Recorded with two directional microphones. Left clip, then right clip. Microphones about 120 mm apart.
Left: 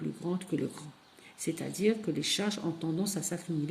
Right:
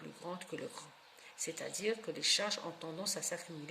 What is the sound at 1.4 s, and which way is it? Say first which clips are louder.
Speech: left 8 dB; 40° left (ahead or behind).